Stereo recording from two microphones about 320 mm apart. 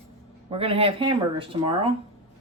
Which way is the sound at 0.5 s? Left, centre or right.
Centre.